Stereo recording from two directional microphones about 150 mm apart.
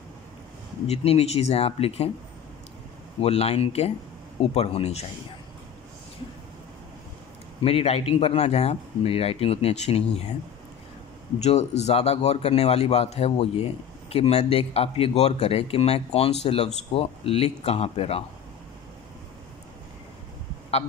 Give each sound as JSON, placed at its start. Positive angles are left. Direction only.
{"t": 0.8, "sound": "a man's voice", "side_deg": 45}
{"t": 3.2, "sound": "a man's voice", "side_deg": 45}
{"t": 7.6, "sound": "a man's voice", "side_deg": 40}
{"t": 11.3, "sound": "a man's voice", "side_deg": 45}